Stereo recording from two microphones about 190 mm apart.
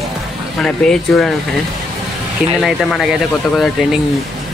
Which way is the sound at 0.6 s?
5° left (ahead or behind).